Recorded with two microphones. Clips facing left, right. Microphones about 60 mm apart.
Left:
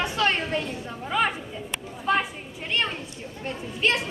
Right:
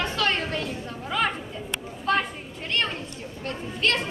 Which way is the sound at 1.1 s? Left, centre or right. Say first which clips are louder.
Left 1 dB; centre.